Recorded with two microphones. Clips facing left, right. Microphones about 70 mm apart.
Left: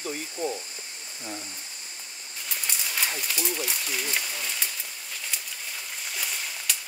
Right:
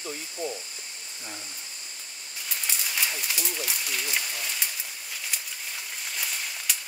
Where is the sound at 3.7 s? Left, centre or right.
Centre.